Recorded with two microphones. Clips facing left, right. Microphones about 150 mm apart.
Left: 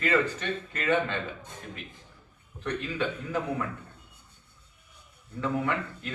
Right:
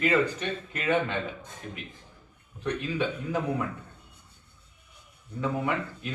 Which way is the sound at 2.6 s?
15° right (ahead or behind).